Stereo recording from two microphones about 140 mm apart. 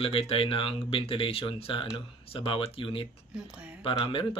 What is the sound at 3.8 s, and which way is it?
Speech, 35° left (ahead or behind).